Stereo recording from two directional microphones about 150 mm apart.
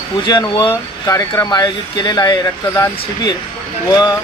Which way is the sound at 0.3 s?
30° left (ahead or behind).